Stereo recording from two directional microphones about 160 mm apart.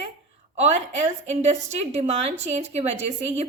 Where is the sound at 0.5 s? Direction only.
45° right (ahead or behind).